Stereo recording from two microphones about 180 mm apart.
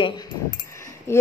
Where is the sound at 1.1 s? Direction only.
15° left (ahead or behind).